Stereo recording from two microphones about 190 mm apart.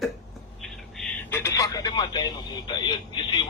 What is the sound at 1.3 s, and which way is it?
Speech, 15° left (ahead or behind).